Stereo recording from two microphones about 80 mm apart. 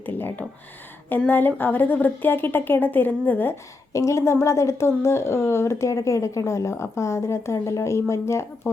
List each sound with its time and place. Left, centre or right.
0.0 s a sound: left
1.3 s a woman's voice: left
3.9 s speech: left